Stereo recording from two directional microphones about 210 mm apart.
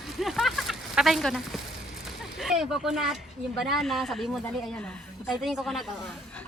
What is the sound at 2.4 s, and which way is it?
Speech, centre (ahead or behind).